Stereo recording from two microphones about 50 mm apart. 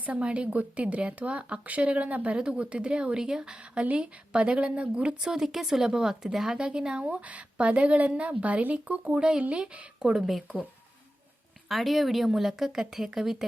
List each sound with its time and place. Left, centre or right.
0.0 s speech: right
5.3 s speech: centre
7.0 s speech: right
10.0 s speech: centre
11.7 s a woman's voice: centre